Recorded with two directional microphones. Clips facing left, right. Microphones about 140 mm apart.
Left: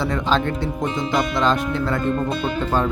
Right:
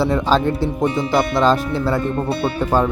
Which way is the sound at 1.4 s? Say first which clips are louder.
Right 3 dB; 35° right (ahead or behind).